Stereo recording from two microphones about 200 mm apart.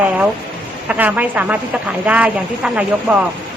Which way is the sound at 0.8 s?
10° right (ahead or behind).